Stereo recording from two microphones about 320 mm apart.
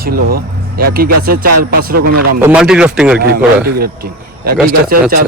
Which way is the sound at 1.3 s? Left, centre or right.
Right.